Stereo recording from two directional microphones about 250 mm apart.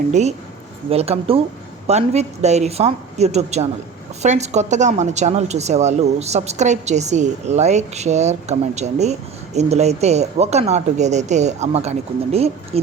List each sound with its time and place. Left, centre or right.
0.1 s a woman's voice: right